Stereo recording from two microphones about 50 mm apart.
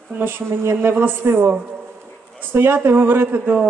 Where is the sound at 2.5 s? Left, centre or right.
Right.